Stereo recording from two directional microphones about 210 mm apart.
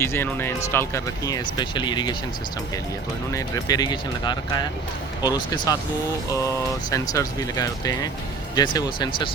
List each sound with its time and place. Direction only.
0.0 s speech: 10° left (ahead or behind)
3.3 s speech: 15° left (ahead or behind)
6.9 s speech: 15° left (ahead or behind)